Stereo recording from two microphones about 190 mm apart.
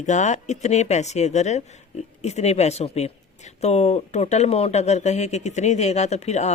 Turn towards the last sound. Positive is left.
turn(degrees=35)  # may be behind; listen again after turning